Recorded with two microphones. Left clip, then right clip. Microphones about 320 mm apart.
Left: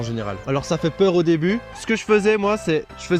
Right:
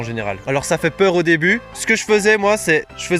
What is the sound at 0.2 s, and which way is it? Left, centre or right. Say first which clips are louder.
Speech: right 5 dB; right.